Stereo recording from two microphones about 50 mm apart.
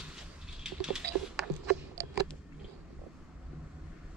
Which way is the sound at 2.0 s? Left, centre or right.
Right.